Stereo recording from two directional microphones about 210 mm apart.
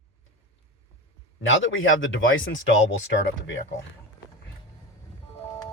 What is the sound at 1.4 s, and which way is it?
Speech, 65° left (ahead or behind).